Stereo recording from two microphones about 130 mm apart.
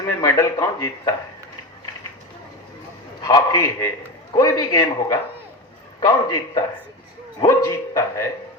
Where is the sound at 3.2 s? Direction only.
30° left (ahead or behind).